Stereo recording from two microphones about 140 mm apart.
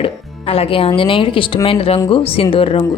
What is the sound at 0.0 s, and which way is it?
A woman's voice, 45° left (ahead or behind).